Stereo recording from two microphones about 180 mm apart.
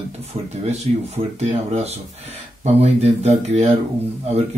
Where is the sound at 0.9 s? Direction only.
40° right (ahead or behind).